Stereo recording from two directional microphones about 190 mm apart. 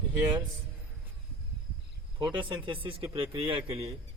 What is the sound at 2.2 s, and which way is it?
Speech, 25° right (ahead or behind).